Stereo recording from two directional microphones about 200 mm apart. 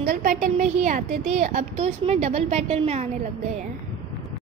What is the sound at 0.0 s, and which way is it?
A woman's voice, 45° right (ahead or behind).